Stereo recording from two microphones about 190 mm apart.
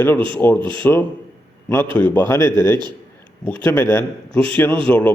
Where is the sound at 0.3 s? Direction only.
10° left (ahead or behind).